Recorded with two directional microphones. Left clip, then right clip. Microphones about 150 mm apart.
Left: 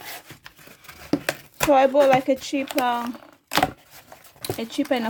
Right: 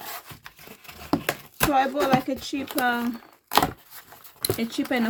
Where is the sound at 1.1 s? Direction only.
25° left (ahead or behind).